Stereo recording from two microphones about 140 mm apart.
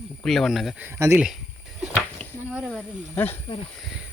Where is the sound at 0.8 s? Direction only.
15° right (ahead or behind).